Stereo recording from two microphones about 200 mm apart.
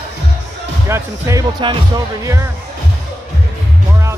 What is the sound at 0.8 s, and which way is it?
Speech, 15° right (ahead or behind).